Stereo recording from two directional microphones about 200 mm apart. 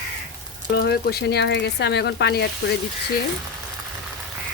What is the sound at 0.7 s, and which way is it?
Speech, 50° left (ahead or behind).